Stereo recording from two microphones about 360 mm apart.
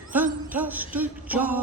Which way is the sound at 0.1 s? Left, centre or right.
Centre.